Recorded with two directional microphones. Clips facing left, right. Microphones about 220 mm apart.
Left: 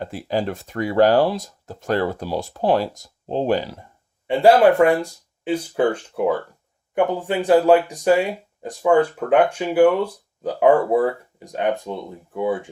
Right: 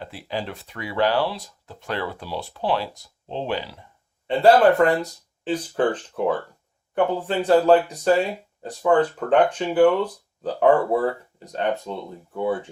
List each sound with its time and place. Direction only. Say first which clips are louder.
0.0 s speech: left 7 dB; 45° left (ahead or behind)
4.3 s speech: left 2 dB; 10° left (ahead or behind)